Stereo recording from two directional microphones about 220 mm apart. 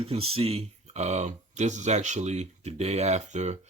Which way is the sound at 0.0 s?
25° right (ahead or behind).